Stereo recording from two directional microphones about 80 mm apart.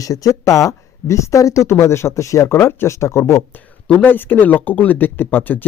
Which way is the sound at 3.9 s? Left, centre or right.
Left.